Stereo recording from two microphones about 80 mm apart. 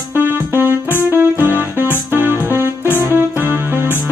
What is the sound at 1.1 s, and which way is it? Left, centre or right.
Keyboard, right.